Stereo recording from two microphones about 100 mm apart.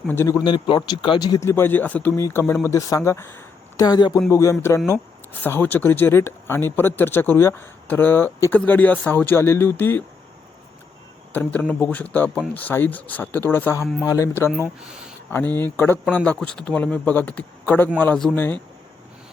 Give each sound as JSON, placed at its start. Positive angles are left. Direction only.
{"t": 0.4, "sound": "speech", "side_deg": 55}
{"t": 1.4, "sound": "speech", "side_deg": 25}
{"t": 3.8, "sound": "speech", "side_deg": 40}
{"t": 4.3, "sound": "speech", "side_deg": 30}
{"t": 11.3, "sound": "speech", "side_deg": 15}